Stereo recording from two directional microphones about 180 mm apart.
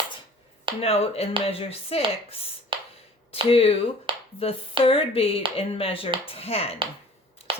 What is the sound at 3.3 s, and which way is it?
Speech, 30° left (ahead or behind).